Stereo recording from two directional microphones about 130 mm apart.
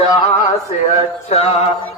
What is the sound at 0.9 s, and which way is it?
Mantra, 55° left (ahead or behind).